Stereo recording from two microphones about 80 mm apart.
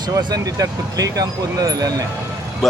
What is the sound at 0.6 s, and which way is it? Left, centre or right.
Speech, right.